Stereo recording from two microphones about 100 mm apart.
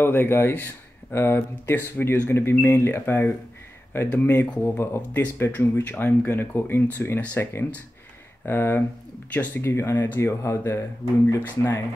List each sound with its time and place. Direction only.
0.0 s speech: 25° left (ahead or behind)